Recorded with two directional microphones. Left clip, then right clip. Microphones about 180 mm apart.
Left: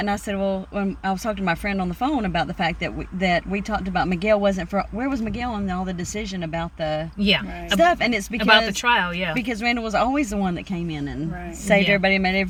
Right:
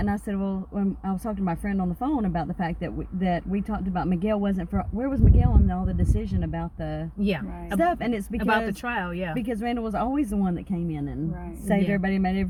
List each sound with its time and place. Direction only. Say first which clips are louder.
0.0 s speech: left 6 dB; 20° left (ahead or behind)
7.3 s speech: left 10 dB; 15° right (ahead or behind)
7.8 s speech: left 6 dB; 20° left (ahead or behind)
8.4 s speech: left 9 dB; 15° right (ahead or behind)
9.5 s speech: left 5 dB; 20° left (ahead or behind)